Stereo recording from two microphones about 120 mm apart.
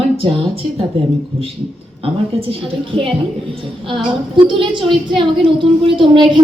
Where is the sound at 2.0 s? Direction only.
50° right (ahead or behind).